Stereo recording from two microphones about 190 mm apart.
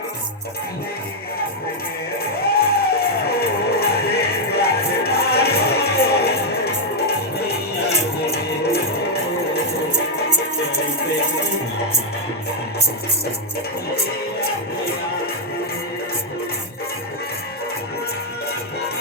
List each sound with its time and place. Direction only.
2.5 s music: 55° left (ahead or behind)